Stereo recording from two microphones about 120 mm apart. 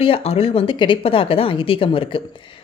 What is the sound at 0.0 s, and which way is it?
A woman's voice, 55° left (ahead or behind).